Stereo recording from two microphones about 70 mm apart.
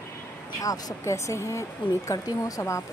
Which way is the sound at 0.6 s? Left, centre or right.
Left.